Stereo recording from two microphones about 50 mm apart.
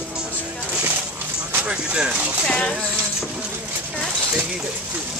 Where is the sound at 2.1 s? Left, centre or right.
Right.